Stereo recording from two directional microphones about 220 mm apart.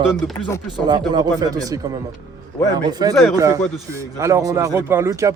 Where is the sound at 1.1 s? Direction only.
20° right (ahead or behind).